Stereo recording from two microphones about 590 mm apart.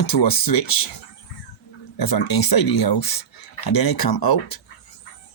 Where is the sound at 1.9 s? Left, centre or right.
Left.